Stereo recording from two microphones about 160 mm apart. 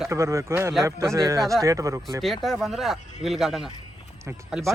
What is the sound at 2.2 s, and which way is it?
Speech, centre (ahead or behind).